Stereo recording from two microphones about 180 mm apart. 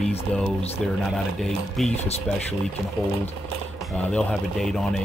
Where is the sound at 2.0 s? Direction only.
35° left (ahead or behind).